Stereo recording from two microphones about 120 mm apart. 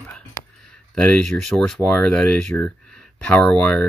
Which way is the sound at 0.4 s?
25° left (ahead or behind).